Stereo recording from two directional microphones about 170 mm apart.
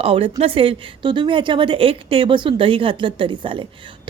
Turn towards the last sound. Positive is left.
turn(degrees=-30)  # may be behind; listen again after turning